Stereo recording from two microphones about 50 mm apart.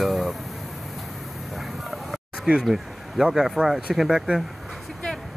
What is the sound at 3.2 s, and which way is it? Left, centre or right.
Speech, centre.